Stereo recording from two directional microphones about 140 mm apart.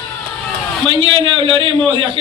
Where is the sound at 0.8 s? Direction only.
40° right (ahead or behind).